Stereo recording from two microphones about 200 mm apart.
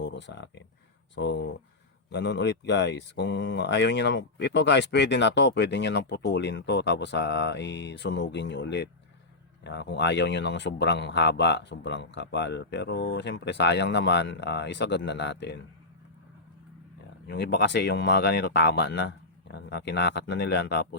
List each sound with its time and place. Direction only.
0.0 s speech: 60° left (ahead or behind)
17.2 s speech: 55° left (ahead or behind)